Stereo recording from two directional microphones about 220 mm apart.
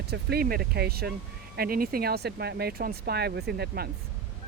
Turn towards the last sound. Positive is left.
turn(degrees=-45)  # may be behind; listen again after turning